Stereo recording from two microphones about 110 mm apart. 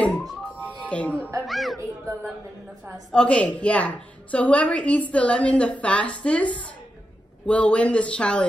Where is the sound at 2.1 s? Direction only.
30° right (ahead or behind).